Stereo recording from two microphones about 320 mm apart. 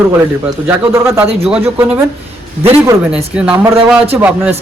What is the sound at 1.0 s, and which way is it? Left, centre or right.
A man's voice, centre.